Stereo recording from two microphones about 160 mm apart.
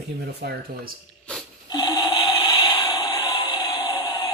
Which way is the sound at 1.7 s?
25° left (ahead or behind).